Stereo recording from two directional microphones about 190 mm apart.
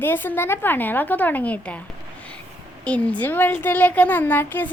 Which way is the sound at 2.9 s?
5° left (ahead or behind).